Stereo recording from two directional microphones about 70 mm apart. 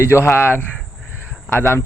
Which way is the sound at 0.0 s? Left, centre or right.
Left.